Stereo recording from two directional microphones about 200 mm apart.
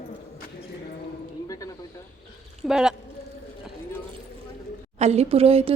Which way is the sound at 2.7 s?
5° right (ahead or behind).